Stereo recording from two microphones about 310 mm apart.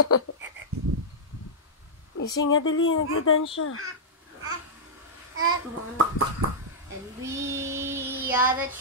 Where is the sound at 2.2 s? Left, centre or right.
Left.